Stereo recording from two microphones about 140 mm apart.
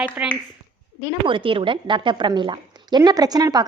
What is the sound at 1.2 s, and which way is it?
A woman's voice, 35° right (ahead or behind).